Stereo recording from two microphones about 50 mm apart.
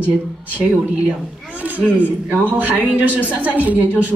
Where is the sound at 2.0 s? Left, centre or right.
Right.